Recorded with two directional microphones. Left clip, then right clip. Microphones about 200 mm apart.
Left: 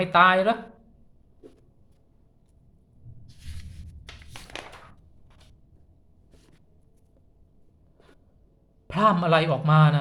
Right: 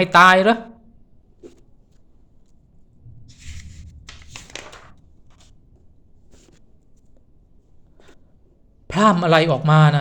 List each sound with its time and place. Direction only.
0.0 s speech: 35° right (ahead or behind)
3.4 s a sound: centre (ahead or behind)
8.9 s a man's voice: 30° right (ahead or behind)